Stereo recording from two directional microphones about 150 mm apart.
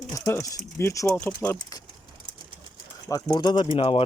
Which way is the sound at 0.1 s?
20° left (ahead or behind).